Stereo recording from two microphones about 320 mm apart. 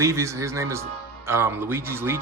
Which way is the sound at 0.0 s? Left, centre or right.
Centre.